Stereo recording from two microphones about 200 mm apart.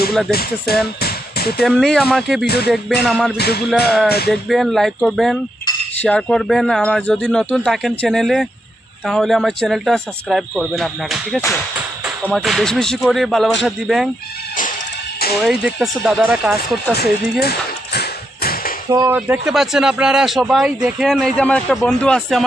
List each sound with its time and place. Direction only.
0.3 s speech: 50° left (ahead or behind)
1.6 s speech: 5° left (ahead or behind)
3.3 s music: 55° left (ahead or behind)
3.8 s speech: centre (ahead or behind)
15.4 s speech: centre (ahead or behind)
17.4 s a sound: 55° left (ahead or behind)
18.9 s speech: 15° right (ahead or behind); by 22.4 s centre (ahead or behind)